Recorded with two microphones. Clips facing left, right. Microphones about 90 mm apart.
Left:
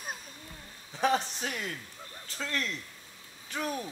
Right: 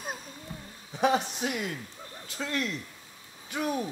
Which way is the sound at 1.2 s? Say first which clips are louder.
Right 4 dB; 15° right (ahead or behind).